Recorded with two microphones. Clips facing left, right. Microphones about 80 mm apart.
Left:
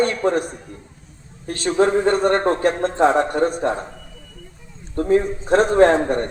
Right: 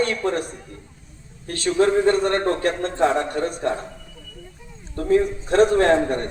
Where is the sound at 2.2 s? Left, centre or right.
Left.